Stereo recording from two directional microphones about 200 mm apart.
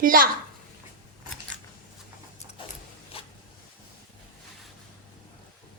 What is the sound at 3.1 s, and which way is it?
Zipper, 30° left (ahead or behind).